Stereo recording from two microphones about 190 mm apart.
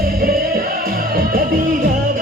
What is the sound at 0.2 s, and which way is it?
Music, 55° right (ahead or behind).